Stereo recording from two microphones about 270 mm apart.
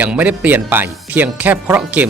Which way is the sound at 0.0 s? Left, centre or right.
Centre.